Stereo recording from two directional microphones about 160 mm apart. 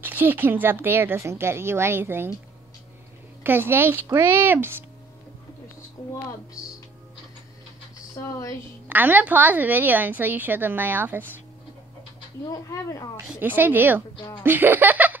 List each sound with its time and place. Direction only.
0.0 s a woman's voice: 10° right (ahead or behind)
3.4 s a woman's voice: 15° right (ahead or behind)
8.8 s a woman's voice: 10° right (ahead or behind)
12.4 s a woman's voice: 20° left (ahead or behind)
13.3 s a woman's voice: 10° right (ahead or behind)